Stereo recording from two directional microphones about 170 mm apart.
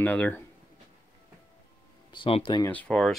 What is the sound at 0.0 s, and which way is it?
Speech, 10° left (ahead or behind).